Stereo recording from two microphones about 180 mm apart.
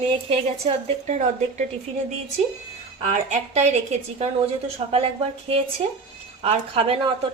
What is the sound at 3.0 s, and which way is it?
A woman's voice, 40° right (ahead or behind).